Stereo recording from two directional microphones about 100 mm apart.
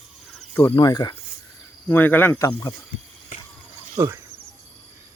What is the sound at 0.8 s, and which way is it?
Speech, 45° left (ahead or behind).